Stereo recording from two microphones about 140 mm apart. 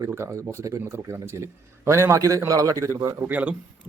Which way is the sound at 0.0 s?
20° right (ahead or behind).